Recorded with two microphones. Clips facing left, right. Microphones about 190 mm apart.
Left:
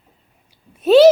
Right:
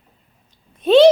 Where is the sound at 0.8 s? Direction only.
5° left (ahead or behind).